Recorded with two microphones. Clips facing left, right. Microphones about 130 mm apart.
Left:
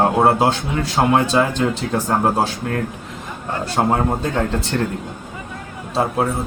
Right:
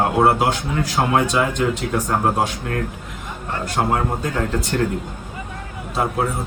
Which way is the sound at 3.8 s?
25° left (ahead or behind).